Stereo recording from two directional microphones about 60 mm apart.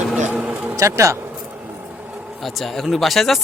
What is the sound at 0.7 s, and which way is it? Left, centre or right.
Speech, right.